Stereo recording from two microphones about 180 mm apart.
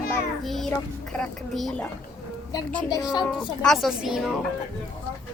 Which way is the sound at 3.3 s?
5° left (ahead or behind).